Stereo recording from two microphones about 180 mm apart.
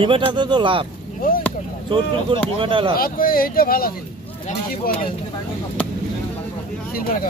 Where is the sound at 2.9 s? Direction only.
55° left (ahead or behind).